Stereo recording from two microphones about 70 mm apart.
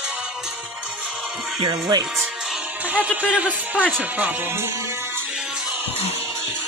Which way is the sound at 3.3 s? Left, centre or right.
Centre.